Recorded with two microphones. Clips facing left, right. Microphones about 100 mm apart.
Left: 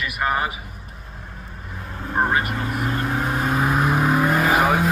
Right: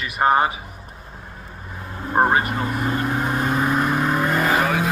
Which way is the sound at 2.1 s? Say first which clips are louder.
Right 3 dB; 30° right (ahead or behind).